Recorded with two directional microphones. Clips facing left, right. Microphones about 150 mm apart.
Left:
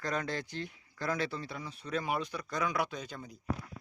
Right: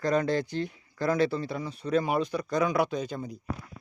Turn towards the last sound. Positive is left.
turn(degrees=-20)  # may be behind; listen again after turning